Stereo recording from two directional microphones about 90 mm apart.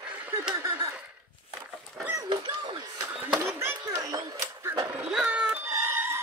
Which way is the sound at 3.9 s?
40° right (ahead or behind).